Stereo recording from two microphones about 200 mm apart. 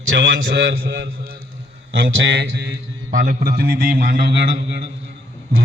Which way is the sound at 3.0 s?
45° right (ahead or behind).